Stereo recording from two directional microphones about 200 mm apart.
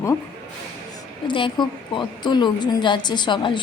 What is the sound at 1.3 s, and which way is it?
A woman's voice, 25° left (ahead or behind).